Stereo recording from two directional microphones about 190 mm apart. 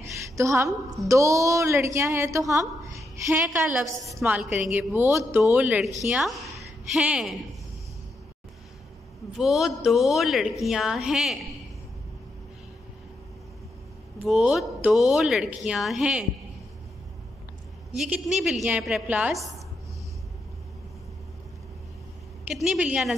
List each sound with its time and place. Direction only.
0.4 s a woman's voice: 15° right (ahead or behind)
3.4 s a woman's voice: centre (ahead or behind)
9.4 s speech: centre (ahead or behind)
14.2 s speech: centre (ahead or behind)
17.9 s a woman's voice: centre (ahead or behind)
22.5 s speech: centre (ahead or behind)